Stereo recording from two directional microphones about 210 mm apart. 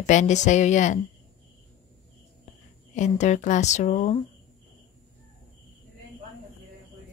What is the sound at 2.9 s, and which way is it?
A woman's voice, 35° left (ahead or behind).